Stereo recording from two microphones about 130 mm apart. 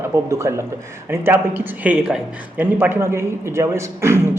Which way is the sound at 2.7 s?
20° right (ahead or behind).